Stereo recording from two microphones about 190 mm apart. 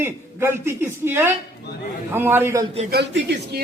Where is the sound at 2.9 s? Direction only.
65° right (ahead or behind).